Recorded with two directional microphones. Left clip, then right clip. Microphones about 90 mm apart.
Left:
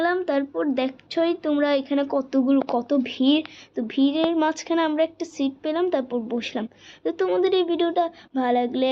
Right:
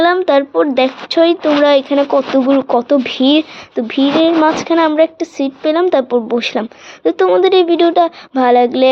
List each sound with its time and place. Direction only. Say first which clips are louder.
0.0 s a woman's voice: right 12 dB; 20° right (ahead or behind); by 4.9 s 35° right (ahead or behind)
4.9 s a woman's voice: right 11 dB; 45° right (ahead or behind)